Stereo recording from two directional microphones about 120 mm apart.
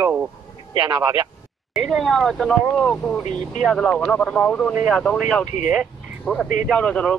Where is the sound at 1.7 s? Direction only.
Centre (ahead or behind).